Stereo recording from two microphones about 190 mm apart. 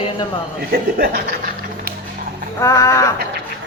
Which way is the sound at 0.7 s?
55° right (ahead or behind).